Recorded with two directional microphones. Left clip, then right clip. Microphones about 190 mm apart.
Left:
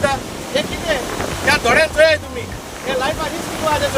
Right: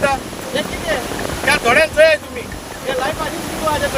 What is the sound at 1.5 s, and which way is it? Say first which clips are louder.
Speech: right 1 dB; 10° right (ahead or behind).